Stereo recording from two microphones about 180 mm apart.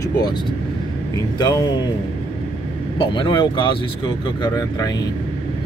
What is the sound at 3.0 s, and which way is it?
A man's voice, 25° left (ahead or behind).